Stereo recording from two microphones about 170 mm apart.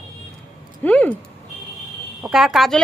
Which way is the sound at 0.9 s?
10° left (ahead or behind).